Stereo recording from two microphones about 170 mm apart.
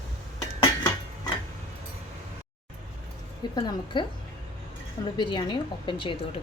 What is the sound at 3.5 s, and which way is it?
Speech, 25° left (ahead or behind).